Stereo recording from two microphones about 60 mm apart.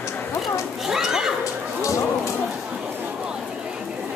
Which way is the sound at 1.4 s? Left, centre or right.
Left.